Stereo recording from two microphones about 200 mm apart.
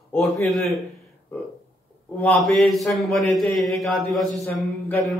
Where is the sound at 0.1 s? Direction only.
Centre (ahead or behind).